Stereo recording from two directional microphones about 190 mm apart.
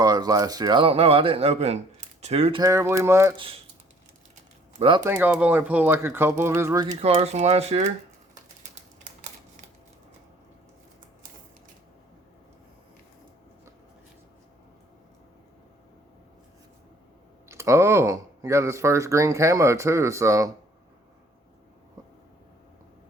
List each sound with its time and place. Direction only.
0.0 s speech: 20° right (ahead or behind)
2.6 s speech: 15° right (ahead or behind)
4.8 s speech: 25° right (ahead or behind)
5.0 s speech: 10° right (ahead or behind)
7.0 s speech: 35° right (ahead or behind)
17.5 s speech: 15° right (ahead or behind)